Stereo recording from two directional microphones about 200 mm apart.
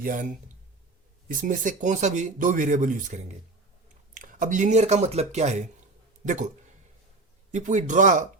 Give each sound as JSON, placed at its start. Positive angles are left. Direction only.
{"t": 0.0, "sound": "speech", "side_deg": -40}
{"t": 7.5, "sound": "speech", "side_deg": -35}